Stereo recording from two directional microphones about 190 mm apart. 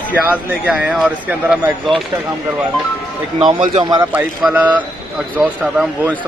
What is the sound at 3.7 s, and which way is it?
Speech, 20° right (ahead or behind).